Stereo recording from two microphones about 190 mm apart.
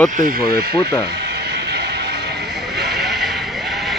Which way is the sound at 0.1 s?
45° right (ahead or behind).